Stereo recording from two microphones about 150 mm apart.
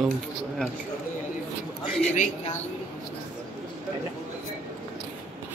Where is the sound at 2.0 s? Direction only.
55° left (ahead or behind).